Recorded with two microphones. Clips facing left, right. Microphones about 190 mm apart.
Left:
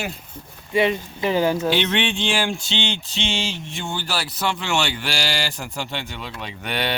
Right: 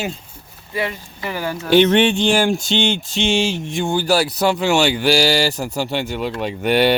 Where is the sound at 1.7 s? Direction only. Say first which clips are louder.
Right 9 dB; 45° right (ahead or behind).